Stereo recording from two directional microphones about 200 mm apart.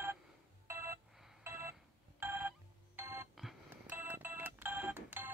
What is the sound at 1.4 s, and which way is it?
Telephone, 10° right (ahead or behind).